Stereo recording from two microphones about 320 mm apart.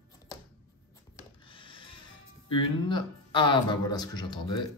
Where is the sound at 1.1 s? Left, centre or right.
Centre.